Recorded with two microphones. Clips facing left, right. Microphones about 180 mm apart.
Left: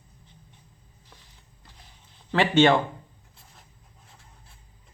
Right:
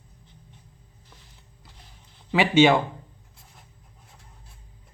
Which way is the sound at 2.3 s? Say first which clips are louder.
Right 1 dB; 5° right (ahead or behind).